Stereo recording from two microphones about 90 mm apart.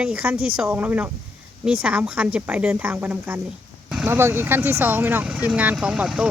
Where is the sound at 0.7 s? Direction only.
20° right (ahead or behind).